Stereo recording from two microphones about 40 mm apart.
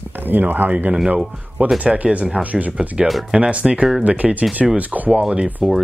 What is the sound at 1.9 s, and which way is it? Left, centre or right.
Speech, centre.